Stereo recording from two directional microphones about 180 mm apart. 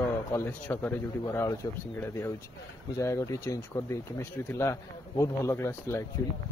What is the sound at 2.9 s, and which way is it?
Speech, 15° left (ahead or behind).